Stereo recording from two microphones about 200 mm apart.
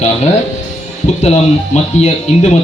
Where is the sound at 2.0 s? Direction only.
35° left (ahead or behind).